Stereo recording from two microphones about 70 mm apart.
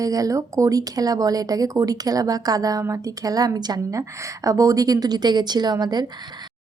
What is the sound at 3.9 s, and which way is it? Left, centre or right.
A woman's voice, right.